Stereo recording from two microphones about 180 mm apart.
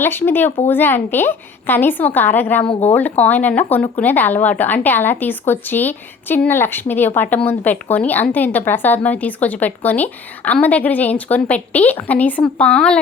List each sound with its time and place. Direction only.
0.0 s a woman's voice: 10° left (ahead or behind)